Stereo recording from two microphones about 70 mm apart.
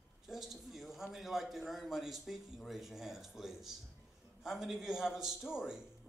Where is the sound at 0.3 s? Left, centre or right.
Centre.